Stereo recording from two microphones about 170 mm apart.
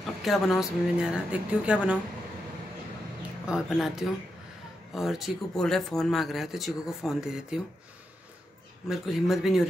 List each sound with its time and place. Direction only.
0.0 s speech: centre (ahead or behind)
3.2 s a sound: 5° right (ahead or behind)
4.9 s speech: centre (ahead or behind)
8.8 s speech: centre (ahead or behind)